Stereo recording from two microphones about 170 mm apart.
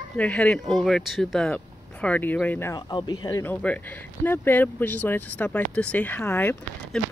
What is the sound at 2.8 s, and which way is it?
Speech, 25° left (ahead or behind).